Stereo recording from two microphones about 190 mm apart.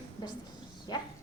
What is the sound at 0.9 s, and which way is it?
Speech, 20° left (ahead or behind).